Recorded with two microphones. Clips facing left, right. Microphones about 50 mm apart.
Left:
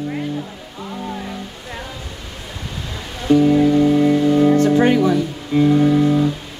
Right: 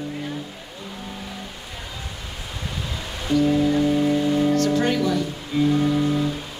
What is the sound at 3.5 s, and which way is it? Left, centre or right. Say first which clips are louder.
Music: left 6 dB; left.